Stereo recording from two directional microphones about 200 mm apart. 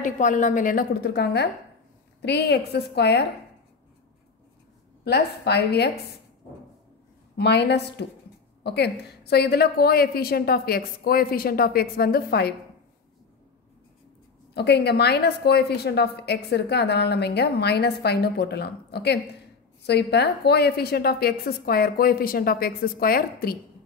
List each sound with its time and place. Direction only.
0.0 s a woman's voice: 40° left (ahead or behind); by 3.3 s 55° left (ahead or behind)
5.0 s a woman's voice: 55° left (ahead or behind)
7.3 s a woman's voice: 55° left (ahead or behind)
14.5 s a woman's voice: 55° left (ahead or behind)